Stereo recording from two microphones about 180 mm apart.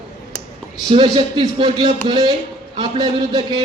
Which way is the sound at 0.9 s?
30° right (ahead or behind).